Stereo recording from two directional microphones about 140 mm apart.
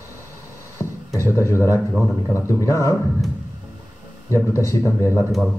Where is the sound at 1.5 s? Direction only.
20° left (ahead or behind).